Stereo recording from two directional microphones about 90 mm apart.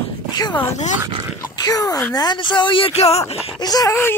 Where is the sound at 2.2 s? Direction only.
55° left (ahead or behind).